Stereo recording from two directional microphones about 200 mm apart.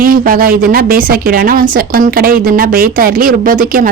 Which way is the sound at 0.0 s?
45° right (ahead or behind).